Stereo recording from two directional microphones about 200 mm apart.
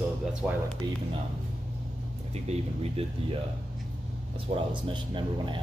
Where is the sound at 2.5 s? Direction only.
30° right (ahead or behind).